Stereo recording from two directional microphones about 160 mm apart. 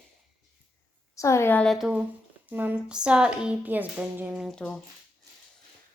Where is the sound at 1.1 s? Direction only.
20° left (ahead or behind); by 2.0 s 5° right (ahead or behind).